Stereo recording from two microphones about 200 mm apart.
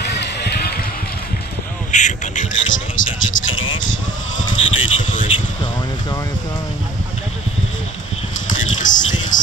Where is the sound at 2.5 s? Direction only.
70° left (ahead or behind).